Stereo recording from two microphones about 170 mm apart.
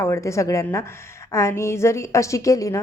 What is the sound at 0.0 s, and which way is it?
A woman's voice, 15° left (ahead or behind).